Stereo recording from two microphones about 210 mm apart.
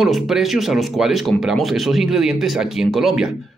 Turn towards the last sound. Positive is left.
turn(degrees=0)  # may be behind; listen again after turning